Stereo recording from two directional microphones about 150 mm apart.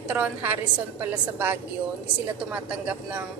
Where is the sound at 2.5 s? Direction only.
10° right (ahead or behind).